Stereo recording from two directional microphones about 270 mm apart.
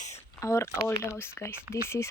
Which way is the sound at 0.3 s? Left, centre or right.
Centre.